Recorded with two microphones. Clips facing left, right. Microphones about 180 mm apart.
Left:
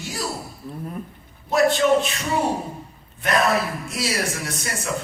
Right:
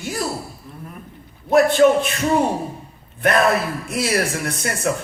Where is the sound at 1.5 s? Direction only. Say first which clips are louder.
Right 4 dB; 55° right (ahead or behind).